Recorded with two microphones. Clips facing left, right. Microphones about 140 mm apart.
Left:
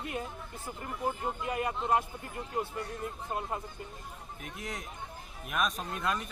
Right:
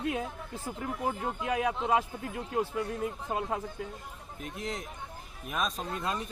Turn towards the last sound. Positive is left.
turn(degrees=-30)  # may be behind; listen again after turning